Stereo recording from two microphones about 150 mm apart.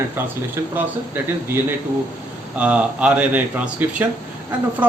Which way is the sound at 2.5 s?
10° right (ahead or behind).